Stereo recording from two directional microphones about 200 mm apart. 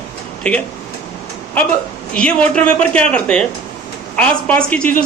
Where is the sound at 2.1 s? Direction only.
5° left (ahead or behind).